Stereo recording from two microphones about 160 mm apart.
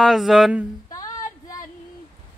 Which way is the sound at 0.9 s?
20° left (ahead or behind).